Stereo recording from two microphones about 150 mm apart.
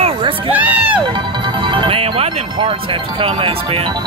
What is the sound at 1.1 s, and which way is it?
Speech, 35° right (ahead or behind).